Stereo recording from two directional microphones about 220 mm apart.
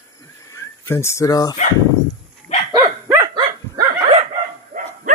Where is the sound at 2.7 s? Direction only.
15° right (ahead or behind).